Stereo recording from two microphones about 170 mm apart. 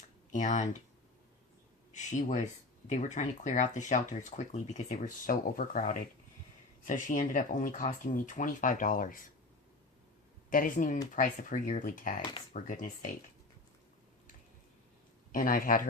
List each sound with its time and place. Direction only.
0.3 s speech: 45° left (ahead or behind)
1.9 s speech: 45° left (ahead or behind)
10.5 s speech: 50° left (ahead or behind)
15.3 s speech: 55° left (ahead or behind)